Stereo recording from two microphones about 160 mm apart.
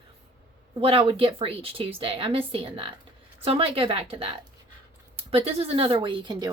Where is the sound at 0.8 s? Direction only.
35° right (ahead or behind).